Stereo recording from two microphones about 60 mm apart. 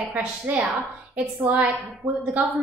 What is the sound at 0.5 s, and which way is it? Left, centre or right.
Speech, right.